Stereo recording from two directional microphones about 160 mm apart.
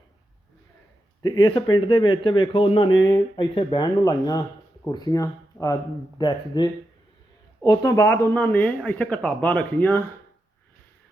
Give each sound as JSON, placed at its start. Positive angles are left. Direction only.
{"t": 1.2, "sound": "speech", "side_deg": 25}